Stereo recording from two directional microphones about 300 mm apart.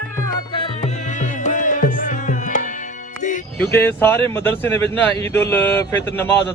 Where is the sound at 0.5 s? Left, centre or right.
Centre.